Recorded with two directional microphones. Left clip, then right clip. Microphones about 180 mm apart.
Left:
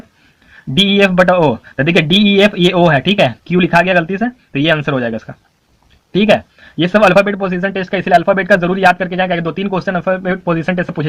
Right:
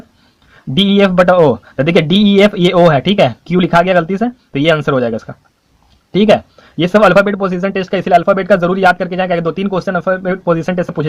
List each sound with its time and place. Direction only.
0.7 s speech: 30° right (ahead or behind)
1.4 s speech: 35° right (ahead or behind)